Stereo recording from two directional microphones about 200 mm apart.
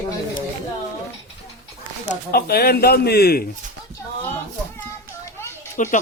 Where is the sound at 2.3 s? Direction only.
50° left (ahead or behind).